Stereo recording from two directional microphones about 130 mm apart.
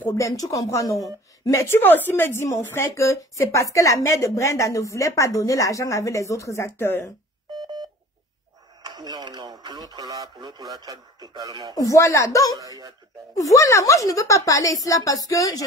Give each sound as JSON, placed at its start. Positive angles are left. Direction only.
{"t": 0.0, "sound": "a woman's voice", "side_deg": 20}
{"t": 8.8, "sound": "speech", "side_deg": -30}
{"t": 11.7, "sound": "a woman's voice", "side_deg": 25}
{"t": 12.5, "sound": "speech", "side_deg": -30}
{"t": 13.3, "sound": "a woman's voice", "side_deg": 25}